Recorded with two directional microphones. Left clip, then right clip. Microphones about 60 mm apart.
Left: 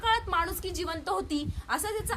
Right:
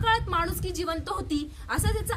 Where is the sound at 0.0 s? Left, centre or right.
Left.